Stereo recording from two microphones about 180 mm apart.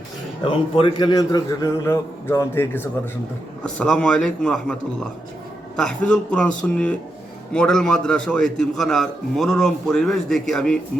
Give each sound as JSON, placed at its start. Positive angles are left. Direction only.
{"t": 0.4, "sound": "a man's voice", "side_deg": 25}